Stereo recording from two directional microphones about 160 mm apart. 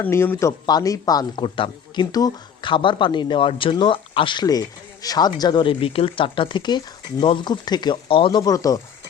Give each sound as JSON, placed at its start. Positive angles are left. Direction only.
{"t": 0.0, "sound": "speech", "side_deg": 15}